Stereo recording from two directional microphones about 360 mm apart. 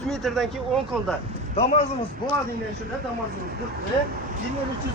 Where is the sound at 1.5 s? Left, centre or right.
Centre.